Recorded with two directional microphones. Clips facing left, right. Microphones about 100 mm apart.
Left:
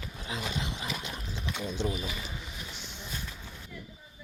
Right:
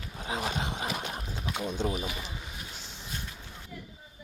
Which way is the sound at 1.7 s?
45° right (ahead or behind).